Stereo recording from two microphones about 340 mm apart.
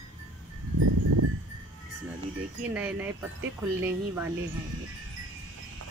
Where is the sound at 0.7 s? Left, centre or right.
Right.